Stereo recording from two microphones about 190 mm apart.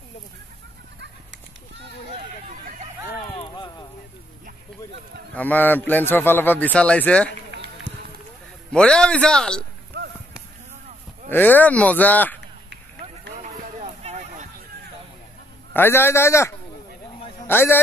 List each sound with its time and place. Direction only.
3.3 s a sound: 20° left (ahead or behind)
5.3 s speech: 10° left (ahead or behind)
7.9 s run: 5° left (ahead or behind)
8.7 s a man's voice: 5° left (ahead or behind)
11.2 s speech: 10° left (ahead or behind)
13.4 s a sound: 35° right (ahead or behind)
15.7 s a man's voice: 10° left (ahead or behind)